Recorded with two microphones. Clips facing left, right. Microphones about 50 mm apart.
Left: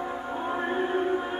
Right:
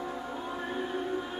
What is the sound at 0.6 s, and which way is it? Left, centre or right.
Music, left.